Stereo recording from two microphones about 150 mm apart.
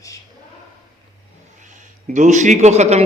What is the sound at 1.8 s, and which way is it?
Speech, 55° right (ahead or behind).